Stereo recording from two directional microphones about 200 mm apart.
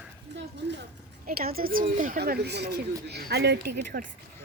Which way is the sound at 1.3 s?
50° right (ahead or behind).